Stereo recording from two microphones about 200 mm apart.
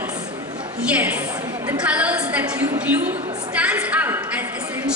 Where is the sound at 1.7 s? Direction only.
5° right (ahead or behind).